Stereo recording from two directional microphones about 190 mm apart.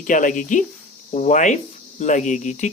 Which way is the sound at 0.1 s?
45° left (ahead or behind).